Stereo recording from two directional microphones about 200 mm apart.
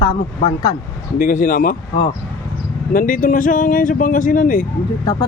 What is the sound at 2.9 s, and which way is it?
Speech, 45° left (ahead or behind).